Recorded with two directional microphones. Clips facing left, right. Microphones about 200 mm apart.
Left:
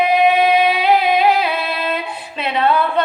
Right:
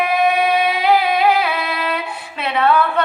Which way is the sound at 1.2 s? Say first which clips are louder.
Left 1 dB; 25° left (ahead or behind).